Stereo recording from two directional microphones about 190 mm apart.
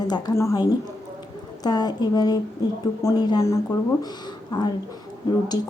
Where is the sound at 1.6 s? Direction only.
20° left (ahead or behind).